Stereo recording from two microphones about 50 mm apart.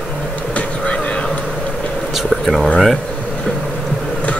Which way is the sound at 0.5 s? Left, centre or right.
Left.